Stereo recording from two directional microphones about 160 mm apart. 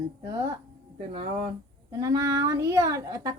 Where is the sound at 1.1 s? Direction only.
35° right (ahead or behind).